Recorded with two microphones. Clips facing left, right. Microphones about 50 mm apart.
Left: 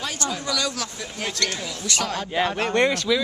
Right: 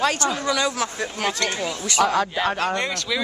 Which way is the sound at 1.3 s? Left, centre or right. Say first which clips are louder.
Right 2 dB; centre.